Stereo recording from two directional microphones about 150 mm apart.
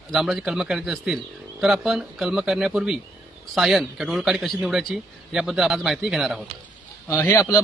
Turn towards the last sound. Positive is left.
turn(degrees=20)  # may be behind; listen again after turning